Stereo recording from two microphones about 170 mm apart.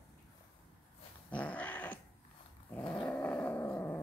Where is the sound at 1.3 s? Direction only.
10° left (ahead or behind).